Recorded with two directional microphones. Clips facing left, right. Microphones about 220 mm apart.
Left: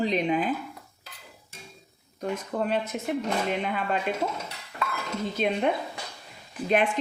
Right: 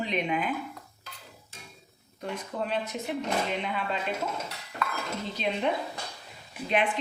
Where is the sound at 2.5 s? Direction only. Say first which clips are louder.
Left 3 dB; 55° left (ahead or behind).